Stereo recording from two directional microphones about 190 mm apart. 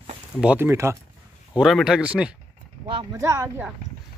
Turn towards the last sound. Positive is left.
turn(degrees=-15)  # may be behind; listen again after turning